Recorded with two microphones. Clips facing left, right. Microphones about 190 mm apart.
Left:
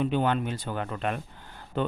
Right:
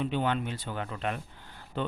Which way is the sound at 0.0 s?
50° left (ahead or behind).